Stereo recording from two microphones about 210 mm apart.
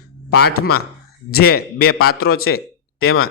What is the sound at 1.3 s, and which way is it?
Speech, 45° left (ahead or behind).